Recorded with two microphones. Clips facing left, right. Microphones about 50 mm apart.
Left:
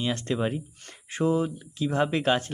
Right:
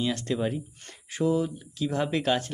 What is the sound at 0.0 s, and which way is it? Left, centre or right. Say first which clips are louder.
Speech: even; left.